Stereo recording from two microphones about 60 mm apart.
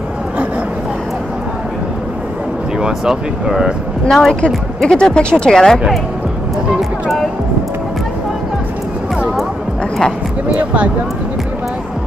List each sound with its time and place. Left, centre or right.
2.8 s speech: centre
4.1 s a woman's voice: centre
6.8 s music: centre
10.5 s speech: right